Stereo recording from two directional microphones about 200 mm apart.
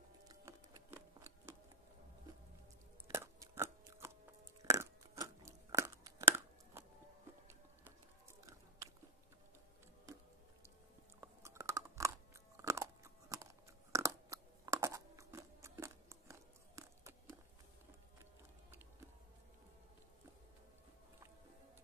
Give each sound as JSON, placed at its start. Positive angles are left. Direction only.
{"t": 0.3, "sound": "music", "side_deg": -15}
{"t": 3.1, "sound": "chewing", "side_deg": -15}
{"t": 4.6, "sound": "crunch", "side_deg": -15}
{"t": 8.5, "sound": "biting", "side_deg": -15}
{"t": 11.1, "sound": "chewing", "side_deg": -15}
{"t": 12.5, "sound": "crunch", "side_deg": -15}
{"t": 13.9, "sound": "chewing", "side_deg": -15}